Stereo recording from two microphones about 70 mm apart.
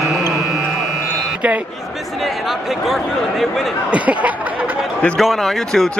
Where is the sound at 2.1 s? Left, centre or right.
Centre.